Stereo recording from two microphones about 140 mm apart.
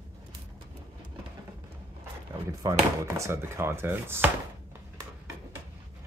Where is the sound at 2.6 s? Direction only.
25° right (ahead or behind).